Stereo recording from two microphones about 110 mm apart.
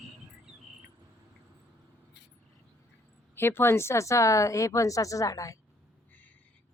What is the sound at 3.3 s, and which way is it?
Speech, 20° left (ahead or behind).